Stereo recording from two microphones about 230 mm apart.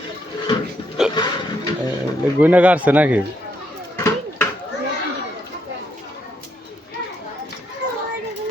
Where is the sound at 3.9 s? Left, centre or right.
Centre.